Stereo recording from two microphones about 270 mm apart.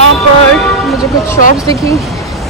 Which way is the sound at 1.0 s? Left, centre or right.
Centre.